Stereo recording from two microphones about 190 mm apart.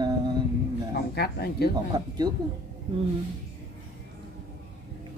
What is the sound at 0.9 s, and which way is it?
Speech, 60° left (ahead or behind).